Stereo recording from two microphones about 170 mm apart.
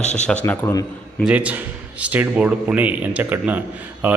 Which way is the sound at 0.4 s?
15° left (ahead or behind).